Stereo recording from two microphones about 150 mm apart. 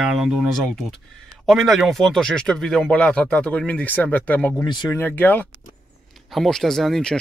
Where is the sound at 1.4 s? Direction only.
Centre (ahead or behind).